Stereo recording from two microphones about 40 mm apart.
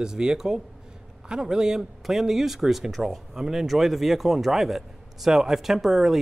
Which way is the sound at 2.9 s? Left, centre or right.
Centre.